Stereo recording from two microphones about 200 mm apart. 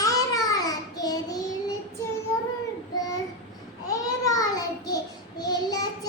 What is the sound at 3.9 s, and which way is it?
Child singing, 15° left (ahead or behind).